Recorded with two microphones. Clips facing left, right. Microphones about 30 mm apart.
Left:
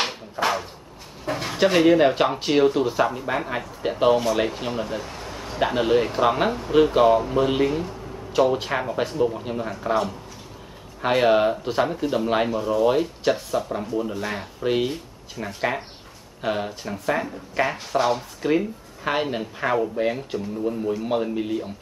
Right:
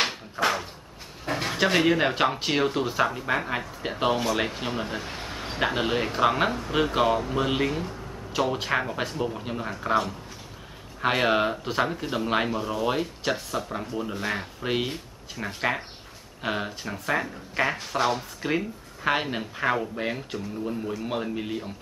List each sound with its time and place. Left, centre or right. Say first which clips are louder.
1.2 s speech: left 3 dB; centre
4.8 s a sound: left 2 dB; right
5.6 s speech: left 5 dB; centre